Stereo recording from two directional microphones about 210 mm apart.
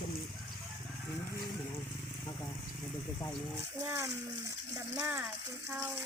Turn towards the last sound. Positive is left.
turn(degrees=-10)  # may be behind; listen again after turning